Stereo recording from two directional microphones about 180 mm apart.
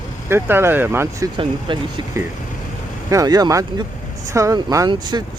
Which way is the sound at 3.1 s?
20° right (ahead or behind).